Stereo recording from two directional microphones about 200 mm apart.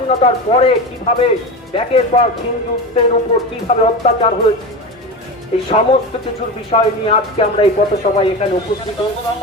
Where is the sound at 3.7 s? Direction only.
30° left (ahead or behind).